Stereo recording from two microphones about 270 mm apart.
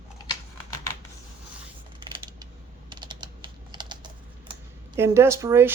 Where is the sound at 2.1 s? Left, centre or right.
Centre.